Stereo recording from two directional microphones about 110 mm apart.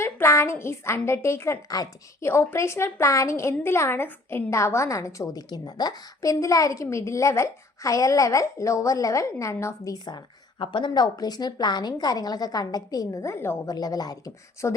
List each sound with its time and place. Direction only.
0.0 s a woman's voice: 25° left (ahead or behind)
13.7 s speech: 35° left (ahead or behind)